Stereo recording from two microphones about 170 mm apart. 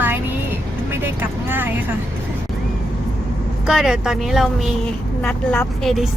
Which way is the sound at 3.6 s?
5° right (ahead or behind).